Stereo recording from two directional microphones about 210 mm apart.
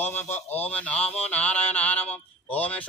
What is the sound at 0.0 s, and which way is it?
A man's voice, 10° left (ahead or behind).